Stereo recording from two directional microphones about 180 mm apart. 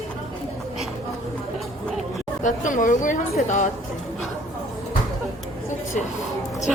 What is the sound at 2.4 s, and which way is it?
Speech, 45° left (ahead or behind).